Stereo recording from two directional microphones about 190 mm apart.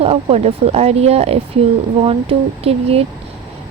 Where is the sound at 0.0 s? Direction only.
30° right (ahead or behind).